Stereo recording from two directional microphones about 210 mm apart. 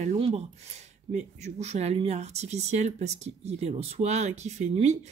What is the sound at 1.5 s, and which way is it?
Speech, 30° right (ahead or behind).